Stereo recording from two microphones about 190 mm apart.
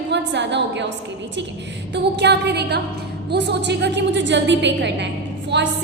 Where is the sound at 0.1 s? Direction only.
65° right (ahead or behind).